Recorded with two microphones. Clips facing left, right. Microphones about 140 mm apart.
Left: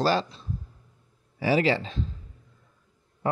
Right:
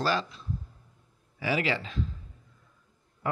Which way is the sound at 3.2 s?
30° left (ahead or behind).